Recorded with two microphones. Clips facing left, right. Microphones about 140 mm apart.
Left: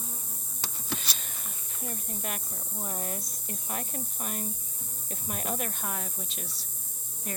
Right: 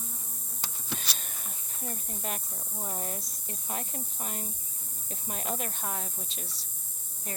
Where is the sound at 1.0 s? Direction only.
45° right (ahead or behind).